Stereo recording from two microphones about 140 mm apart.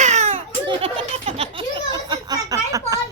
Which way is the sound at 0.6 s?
40° right (ahead or behind).